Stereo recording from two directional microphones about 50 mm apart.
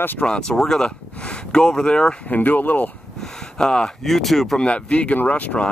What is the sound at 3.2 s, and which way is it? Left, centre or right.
Speech, centre.